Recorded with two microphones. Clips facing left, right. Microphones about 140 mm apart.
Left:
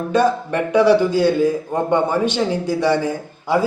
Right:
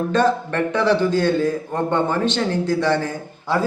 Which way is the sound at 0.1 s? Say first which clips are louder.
Left 4 dB; 10° left (ahead or behind).